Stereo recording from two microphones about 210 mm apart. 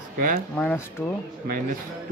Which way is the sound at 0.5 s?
5° left (ahead or behind).